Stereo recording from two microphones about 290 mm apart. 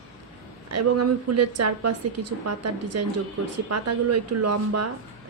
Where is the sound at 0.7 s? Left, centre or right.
Right.